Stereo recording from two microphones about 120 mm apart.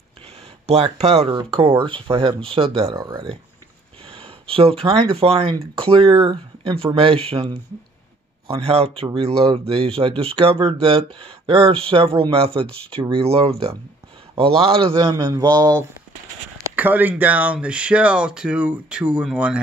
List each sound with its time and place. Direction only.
0.7 s speech: 60° right (ahead or behind)
4.1 s speech: 50° right (ahead or behind)
15.1 s speech: 35° right (ahead or behind)
16.7 s speech: 15° right (ahead or behind)